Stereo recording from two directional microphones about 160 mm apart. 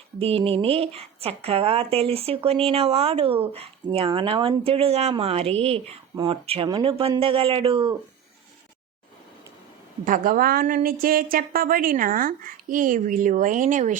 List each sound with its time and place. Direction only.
0.2 s a woman's voice: 35° right (ahead or behind)
6.7 s speech: 25° right (ahead or behind)
7.2 s a woman's voice: 35° right (ahead or behind)
10.0 s a woman's voice: 60° right (ahead or behind)